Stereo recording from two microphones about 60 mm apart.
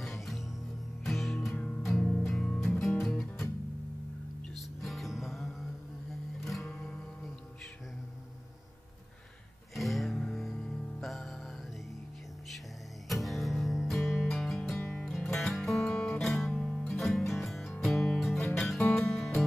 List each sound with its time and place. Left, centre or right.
0.0 s music: centre
1.7 s music: centre
4.6 s music: centre
6.7 s music: centre
9.8 s music: centre
13.1 s music: centre